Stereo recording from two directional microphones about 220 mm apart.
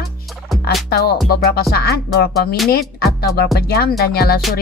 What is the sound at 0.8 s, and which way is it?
Speech, 45° left (ahead or behind).